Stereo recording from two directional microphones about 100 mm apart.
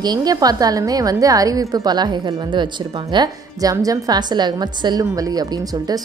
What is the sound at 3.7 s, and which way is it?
A woman's voice, 35° right (ahead or behind).